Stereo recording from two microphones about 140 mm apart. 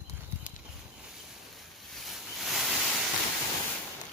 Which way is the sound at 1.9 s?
Centre (ahead or behind).